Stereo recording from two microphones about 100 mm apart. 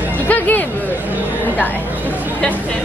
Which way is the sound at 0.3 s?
15° left (ahead or behind).